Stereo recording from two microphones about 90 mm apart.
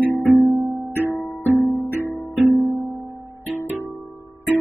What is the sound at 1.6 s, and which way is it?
Music, 50° left (ahead or behind).